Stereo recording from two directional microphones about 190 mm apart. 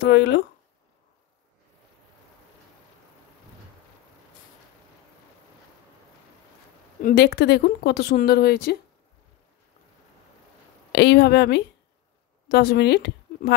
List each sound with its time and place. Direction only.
0.0 s speech: 65° left (ahead or behind)
7.0 s speech: 50° left (ahead or behind)
10.9 s speech: 60° left (ahead or behind)